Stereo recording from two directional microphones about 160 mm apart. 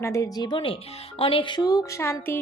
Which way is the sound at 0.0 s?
20° left (ahead or behind).